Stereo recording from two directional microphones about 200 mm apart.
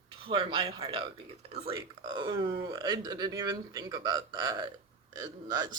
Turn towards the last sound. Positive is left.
turn(degrees=-20)  # may be behind; listen again after turning